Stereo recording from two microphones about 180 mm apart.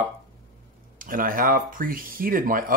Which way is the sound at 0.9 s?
50° right (ahead or behind).